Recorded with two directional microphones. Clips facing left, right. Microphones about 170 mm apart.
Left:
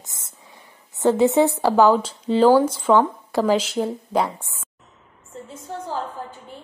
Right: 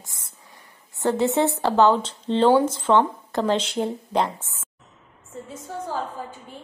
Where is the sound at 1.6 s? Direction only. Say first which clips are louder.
Left 2 dB; 5° left (ahead or behind).